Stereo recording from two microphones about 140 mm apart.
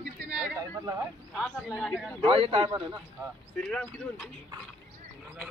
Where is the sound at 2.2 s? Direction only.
40° right (ahead or behind).